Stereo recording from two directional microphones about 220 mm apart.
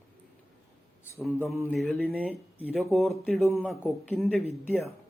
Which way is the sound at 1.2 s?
Centre (ahead or behind).